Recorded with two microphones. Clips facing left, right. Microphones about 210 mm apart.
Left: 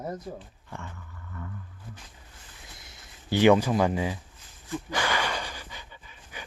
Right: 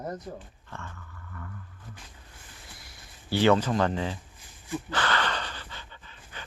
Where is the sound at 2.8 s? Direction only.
20° left (ahead or behind).